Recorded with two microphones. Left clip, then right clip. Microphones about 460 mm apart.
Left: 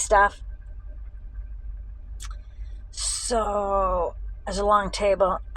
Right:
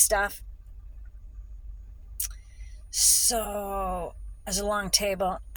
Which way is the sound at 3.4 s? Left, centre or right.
Right.